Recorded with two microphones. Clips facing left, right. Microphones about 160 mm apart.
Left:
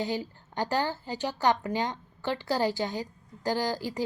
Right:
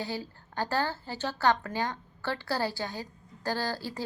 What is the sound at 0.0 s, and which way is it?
A woman's voice, 20° left (ahead or behind).